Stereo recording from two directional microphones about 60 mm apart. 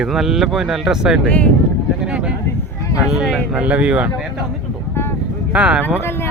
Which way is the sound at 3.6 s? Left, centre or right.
Right.